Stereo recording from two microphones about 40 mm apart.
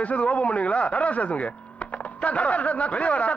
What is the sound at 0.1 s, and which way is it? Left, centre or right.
Speech, left.